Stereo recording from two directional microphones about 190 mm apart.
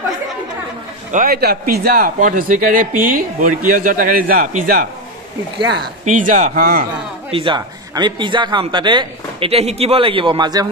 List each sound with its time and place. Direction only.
1.1 s speech: 50° right (ahead or behind)
6.1 s speech: 40° right (ahead or behind)
7.2 s speech: 30° right (ahead or behind)